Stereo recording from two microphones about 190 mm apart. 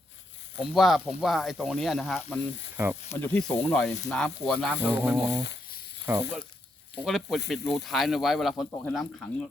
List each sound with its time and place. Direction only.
0.5 s speech: 5° right (ahead or behind)
2.7 s speech: 10° right (ahead or behind)
3.1 s speech: 10° left (ahead or behind); by 5.3 s 5° right (ahead or behind)
5.3 s a sound: 65° left (ahead or behind)
6.1 s speech: 10° right (ahead or behind)